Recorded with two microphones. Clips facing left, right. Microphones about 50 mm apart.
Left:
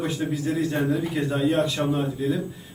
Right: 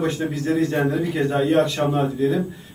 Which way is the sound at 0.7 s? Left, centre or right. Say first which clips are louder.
Right 3 dB; right.